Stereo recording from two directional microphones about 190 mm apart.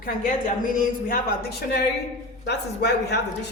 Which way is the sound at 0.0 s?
50° left (ahead or behind).